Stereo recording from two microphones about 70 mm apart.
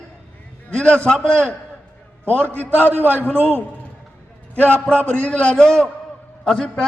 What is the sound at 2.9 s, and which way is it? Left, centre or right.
Speech, right.